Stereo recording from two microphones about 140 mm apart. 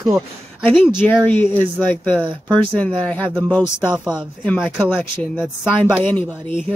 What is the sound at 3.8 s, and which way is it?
Speech, 5° right (ahead or behind).